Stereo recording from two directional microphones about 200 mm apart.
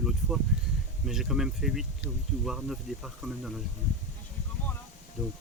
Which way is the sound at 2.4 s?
Centre (ahead or behind).